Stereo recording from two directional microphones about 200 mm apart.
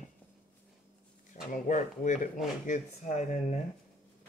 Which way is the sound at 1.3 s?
40° left (ahead or behind).